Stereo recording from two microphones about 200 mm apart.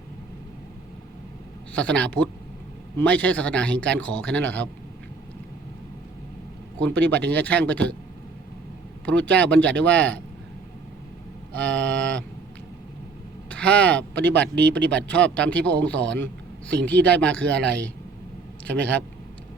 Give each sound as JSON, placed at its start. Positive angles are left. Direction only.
{"t": 1.7, "sound": "a man's voice", "side_deg": 5}
{"t": 6.7, "sound": "a man's voice", "side_deg": 5}
{"t": 9.0, "sound": "a man's voice", "side_deg": 5}
{"t": 11.5, "sound": "a sound", "side_deg": 5}
{"t": 13.5, "sound": "speech", "side_deg": 5}
{"t": 14.4, "sound": "speech", "side_deg": -55}
{"t": 14.9, "sound": "a man's voice", "side_deg": 5}